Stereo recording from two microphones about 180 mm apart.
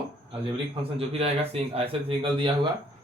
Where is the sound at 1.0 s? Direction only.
35° right (ahead or behind).